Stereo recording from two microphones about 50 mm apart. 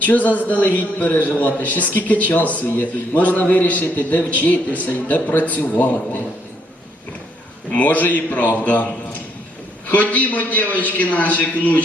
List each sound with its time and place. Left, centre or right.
0.0 s a man's voice: left
2.6 s speech: left
3.2 s a man's voice: left
7.7 s a man's voice: left